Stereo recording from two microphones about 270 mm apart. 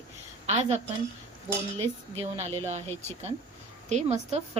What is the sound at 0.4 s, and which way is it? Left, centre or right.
Speech, right.